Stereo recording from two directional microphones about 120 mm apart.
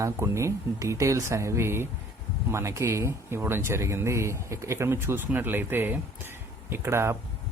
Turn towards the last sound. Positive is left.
turn(degrees=-20)  # may be behind; listen again after turning